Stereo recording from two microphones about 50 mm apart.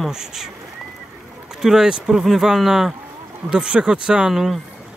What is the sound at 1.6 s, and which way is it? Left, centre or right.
Speech, centre.